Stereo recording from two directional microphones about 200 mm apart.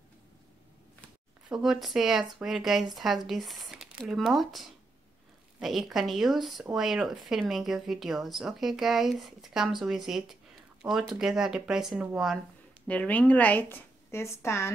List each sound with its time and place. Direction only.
1.5 s speech: centre (ahead or behind)
12.8 s a woman's voice: 5° left (ahead or behind)